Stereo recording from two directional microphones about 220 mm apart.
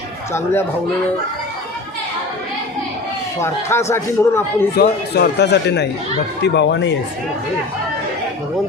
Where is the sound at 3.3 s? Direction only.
10° left (ahead or behind).